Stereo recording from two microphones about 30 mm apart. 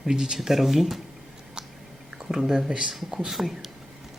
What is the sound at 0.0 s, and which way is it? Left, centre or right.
Speech, centre.